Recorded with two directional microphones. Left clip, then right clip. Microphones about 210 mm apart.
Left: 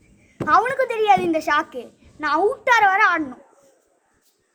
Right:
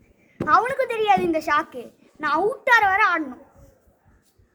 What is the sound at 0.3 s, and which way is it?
A child's voice, 10° left (ahead or behind).